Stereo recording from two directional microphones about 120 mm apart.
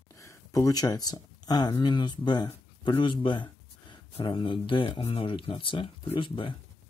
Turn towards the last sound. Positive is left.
turn(degrees=45)  # may be behind; listen again after turning